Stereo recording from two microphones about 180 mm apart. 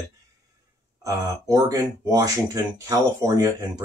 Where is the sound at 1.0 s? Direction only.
15° right (ahead or behind).